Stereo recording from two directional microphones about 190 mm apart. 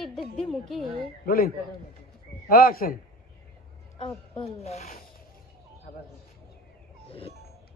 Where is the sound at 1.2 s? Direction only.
50° left (ahead or behind).